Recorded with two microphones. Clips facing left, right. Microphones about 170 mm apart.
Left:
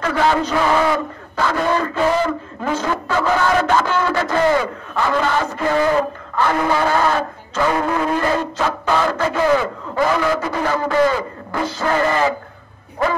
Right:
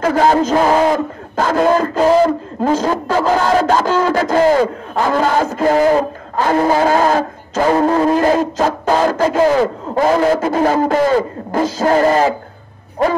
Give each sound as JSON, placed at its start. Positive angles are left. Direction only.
{"t": 0.0, "sound": "a man's voice", "side_deg": -40}